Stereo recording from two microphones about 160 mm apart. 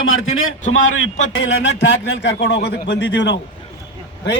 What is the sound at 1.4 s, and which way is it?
A man's voice, 90° left.